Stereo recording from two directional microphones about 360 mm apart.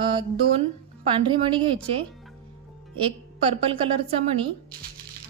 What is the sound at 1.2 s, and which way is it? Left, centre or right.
A woman's voice, centre.